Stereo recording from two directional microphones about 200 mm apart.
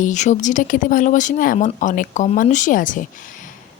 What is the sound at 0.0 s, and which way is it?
Speech, 35° left (ahead or behind).